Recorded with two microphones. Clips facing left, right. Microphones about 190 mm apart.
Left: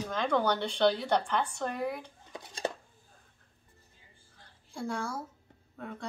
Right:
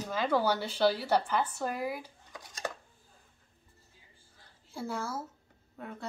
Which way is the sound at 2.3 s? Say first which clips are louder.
Left 4 dB; 30° left (ahead or behind).